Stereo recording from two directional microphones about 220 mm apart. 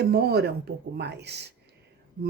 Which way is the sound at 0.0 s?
45° right (ahead or behind).